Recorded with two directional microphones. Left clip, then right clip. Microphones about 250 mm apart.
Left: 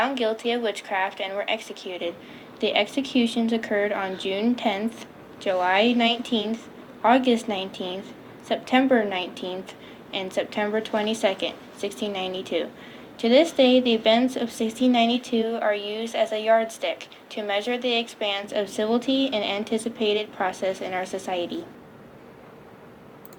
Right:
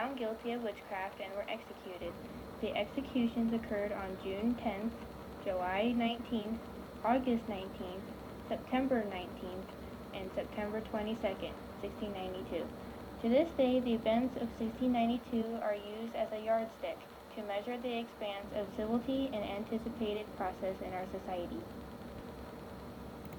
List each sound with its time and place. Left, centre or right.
0.0 s speech: left